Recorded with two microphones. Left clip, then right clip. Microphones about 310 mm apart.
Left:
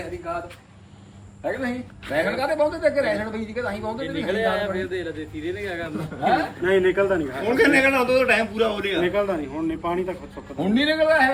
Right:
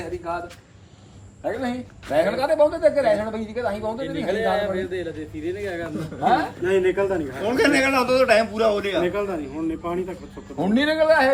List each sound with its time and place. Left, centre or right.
1.5 s a man's voice: centre
2.3 s a man's voice: centre
7.4 s a man's voice: centre
9.0 s a man's voice: centre
10.6 s a man's voice: right